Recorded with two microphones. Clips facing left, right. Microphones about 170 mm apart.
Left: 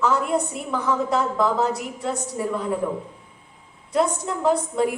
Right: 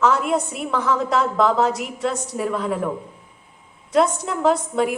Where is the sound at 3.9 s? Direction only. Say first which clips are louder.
Right 3 dB; 85° right.